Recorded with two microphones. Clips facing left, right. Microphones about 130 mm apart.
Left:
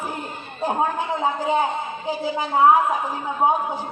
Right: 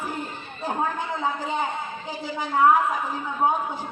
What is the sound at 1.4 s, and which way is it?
A man's voice, 10° left (ahead or behind).